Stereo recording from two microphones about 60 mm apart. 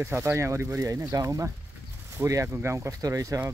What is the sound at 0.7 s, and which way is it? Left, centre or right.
Speech, right.